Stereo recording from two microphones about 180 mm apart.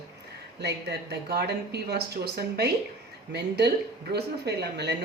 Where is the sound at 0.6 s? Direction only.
65° right (ahead or behind).